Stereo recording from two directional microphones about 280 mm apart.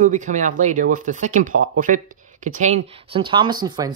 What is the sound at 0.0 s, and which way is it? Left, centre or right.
Speech, right.